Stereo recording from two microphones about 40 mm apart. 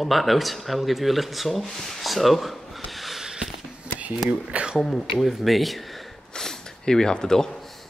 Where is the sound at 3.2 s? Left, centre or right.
Centre.